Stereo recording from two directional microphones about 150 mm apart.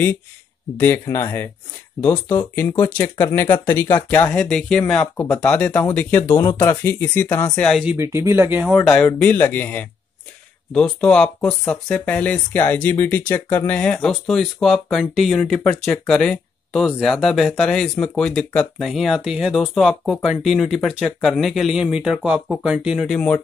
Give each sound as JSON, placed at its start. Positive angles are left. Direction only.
{"t": 0.7, "sound": "speech", "side_deg": 15}
{"t": 7.8, "sound": "speech", "side_deg": -15}
{"t": 8.7, "sound": "speech", "side_deg": 5}